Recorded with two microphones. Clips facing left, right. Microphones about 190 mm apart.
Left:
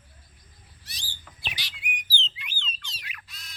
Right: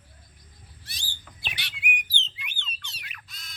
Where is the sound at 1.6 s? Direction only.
65° right (ahead or behind).